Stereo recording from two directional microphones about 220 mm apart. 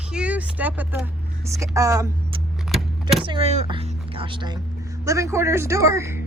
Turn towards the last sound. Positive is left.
turn(degrees=-15)  # may be behind; listen again after turning